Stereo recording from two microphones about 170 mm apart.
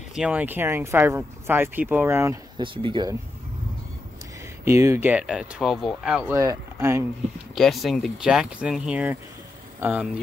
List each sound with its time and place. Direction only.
0.1 s speech: 5° right (ahead or behind)
2.5 s speech: 30° right (ahead or behind)
4.6 s speech: 15° right (ahead or behind)
6.3 s speech: 15° right (ahead or behind)
7.5 s speech: centre (ahead or behind)